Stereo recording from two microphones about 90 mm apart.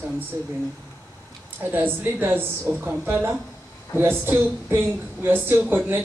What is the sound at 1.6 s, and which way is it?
A woman's voice, 20° right (ahead or behind).